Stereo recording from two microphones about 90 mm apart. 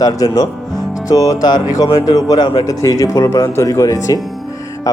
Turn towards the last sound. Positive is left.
turn(degrees=40)  # may be behind; listen again after turning